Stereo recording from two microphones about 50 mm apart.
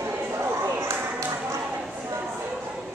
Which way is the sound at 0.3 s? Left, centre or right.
Right.